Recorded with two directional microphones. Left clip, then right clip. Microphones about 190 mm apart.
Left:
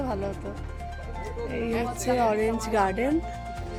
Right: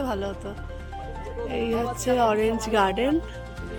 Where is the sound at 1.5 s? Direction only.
15° right (ahead or behind).